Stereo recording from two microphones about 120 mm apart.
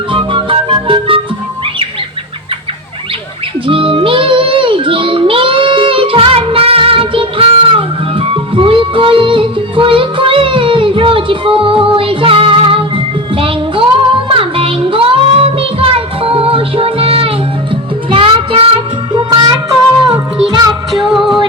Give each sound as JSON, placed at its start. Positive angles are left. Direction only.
{"t": 0.1, "sound": "music", "side_deg": -45}
{"t": 3.7, "sound": "music", "side_deg": -50}
{"t": 14.3, "sound": "child singing", "side_deg": -50}
{"t": 19.3, "sound": "music", "side_deg": -35}
{"t": 21.1, "sound": "music", "side_deg": 0}